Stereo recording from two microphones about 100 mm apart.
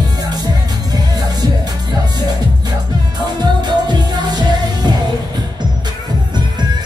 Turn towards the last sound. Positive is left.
turn(degrees=-45)  # may be behind; listen again after turning